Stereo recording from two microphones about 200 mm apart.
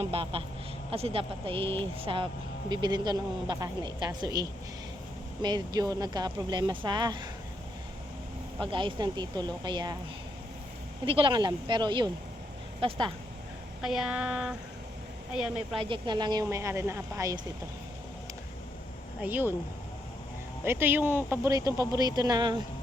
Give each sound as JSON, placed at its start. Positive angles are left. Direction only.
{"t": 0.0, "sound": "speech", "side_deg": -30}
{"t": 8.6, "sound": "speech", "side_deg": -25}
{"t": 11.0, "sound": "speech", "side_deg": -25}
{"t": 13.8, "sound": "a sound", "side_deg": -5}
{"t": 15.8, "sound": "speech", "side_deg": -25}
{"t": 19.2, "sound": "speech", "side_deg": -10}
{"t": 20.7, "sound": "speech", "side_deg": -10}